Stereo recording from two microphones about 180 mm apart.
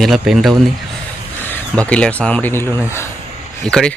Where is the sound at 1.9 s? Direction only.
5° left (ahead or behind).